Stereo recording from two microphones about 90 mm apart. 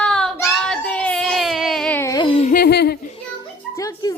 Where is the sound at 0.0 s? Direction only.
5° left (ahead or behind).